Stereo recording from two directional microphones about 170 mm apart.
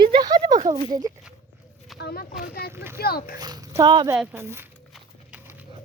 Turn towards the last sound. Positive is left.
turn(degrees=-15)  # may be behind; listen again after turning